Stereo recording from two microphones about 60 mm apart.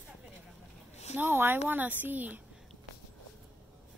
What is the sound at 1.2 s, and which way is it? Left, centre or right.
Speech, right.